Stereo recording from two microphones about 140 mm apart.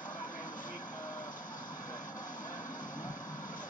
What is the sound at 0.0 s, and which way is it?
Vehicle, 70° left (ahead or behind).